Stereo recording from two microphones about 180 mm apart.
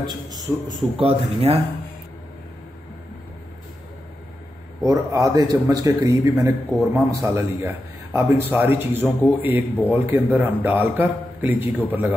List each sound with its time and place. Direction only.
0.0 s a man's voice: 25° right (ahead or behind)
4.8 s a man's voice: 20° right (ahead or behind)